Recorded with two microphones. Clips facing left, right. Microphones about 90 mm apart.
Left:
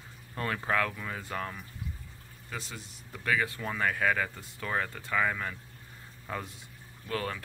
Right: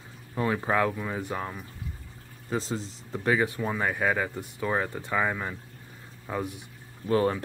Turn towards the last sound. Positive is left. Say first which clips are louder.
# right 10 dB
turn(degrees=-25)  # may be behind; listen again after turning